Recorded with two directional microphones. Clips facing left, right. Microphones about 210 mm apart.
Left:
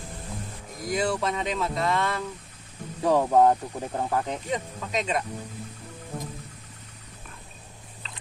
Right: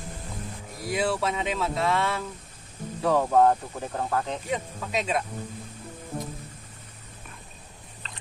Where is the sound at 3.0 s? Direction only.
15° left (ahead or behind).